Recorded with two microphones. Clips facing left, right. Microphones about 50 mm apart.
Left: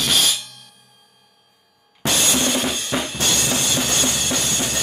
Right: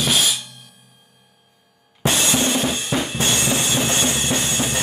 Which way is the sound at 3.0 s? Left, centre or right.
Right.